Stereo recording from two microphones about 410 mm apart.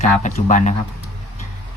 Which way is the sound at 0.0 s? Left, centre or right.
Centre.